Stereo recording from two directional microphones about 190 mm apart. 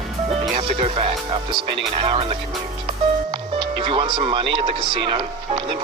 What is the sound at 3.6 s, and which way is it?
Speech, 25° right (ahead or behind).